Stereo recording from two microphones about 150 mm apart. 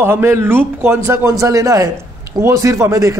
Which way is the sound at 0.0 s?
15° right (ahead or behind).